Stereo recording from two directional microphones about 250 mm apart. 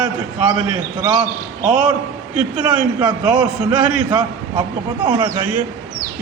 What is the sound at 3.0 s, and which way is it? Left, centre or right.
Speech, centre.